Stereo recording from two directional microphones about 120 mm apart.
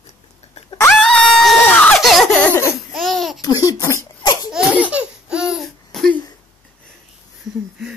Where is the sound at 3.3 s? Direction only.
30° left (ahead or behind).